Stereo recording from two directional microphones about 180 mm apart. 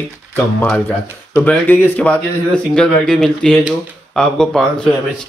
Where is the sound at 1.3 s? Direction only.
10° left (ahead or behind).